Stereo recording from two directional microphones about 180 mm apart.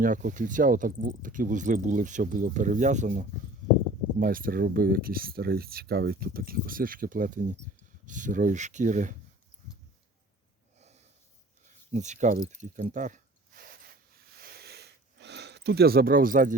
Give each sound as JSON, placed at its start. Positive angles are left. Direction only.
{"t": 0.0, "sound": "speech", "side_deg": -45}
{"t": 10.8, "sound": "snort", "side_deg": -35}
{"t": 11.9, "sound": "speech", "side_deg": -40}
{"t": 12.5, "sound": "a sound", "side_deg": -40}